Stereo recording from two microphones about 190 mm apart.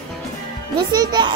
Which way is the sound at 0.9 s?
20° right (ahead or behind).